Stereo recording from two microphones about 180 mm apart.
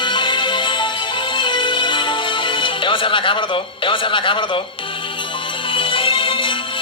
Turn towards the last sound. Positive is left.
turn(degrees=30)  # may be behind; listen again after turning